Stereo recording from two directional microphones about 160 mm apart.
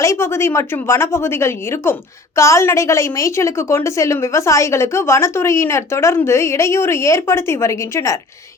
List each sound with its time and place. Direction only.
0.0 s a woman's voice: 15° left (ahead or behind)